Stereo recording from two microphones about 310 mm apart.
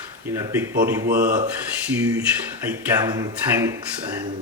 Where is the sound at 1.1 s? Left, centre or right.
Right.